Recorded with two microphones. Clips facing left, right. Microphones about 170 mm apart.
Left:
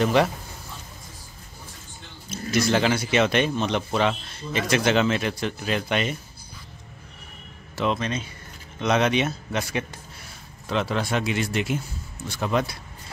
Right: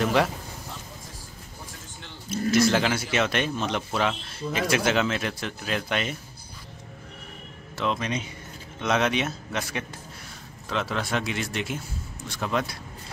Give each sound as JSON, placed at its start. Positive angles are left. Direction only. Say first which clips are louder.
{"t": 0.0, "sound": "a man's voice", "louder": "left 3 dB", "side_deg": 0}
{"t": 2.5, "sound": "a man's voice", "louder": "left 1 dB", "side_deg": 0}
{"t": 7.7, "sound": "speech", "louder": "left 3 dB", "side_deg": 5}
{"t": 8.0, "sound": "speech", "louder": "left 1 dB", "side_deg": -15}
{"t": 8.8, "sound": "a man's voice", "louder": "left 3 dB", "side_deg": 0}